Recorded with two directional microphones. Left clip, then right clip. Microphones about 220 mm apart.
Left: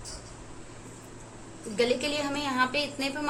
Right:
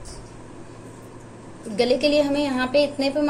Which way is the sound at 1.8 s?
30° left (ahead or behind).